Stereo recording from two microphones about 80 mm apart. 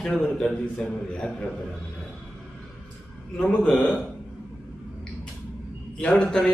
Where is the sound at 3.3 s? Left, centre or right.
Centre.